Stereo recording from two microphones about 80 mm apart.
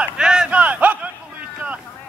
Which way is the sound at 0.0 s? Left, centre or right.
Centre.